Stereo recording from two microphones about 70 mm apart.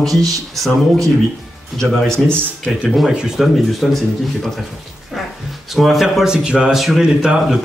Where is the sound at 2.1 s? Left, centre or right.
Right.